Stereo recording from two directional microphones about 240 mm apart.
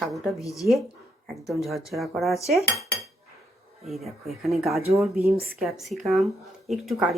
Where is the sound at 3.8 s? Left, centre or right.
Centre.